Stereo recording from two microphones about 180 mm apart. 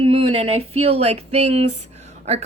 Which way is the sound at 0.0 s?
30° right (ahead or behind).